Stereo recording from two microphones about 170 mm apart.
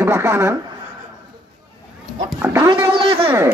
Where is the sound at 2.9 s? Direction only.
30° right (ahead or behind).